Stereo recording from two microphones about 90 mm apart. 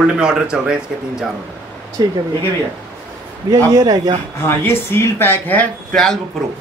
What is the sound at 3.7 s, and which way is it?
Speech, 45° right (ahead or behind).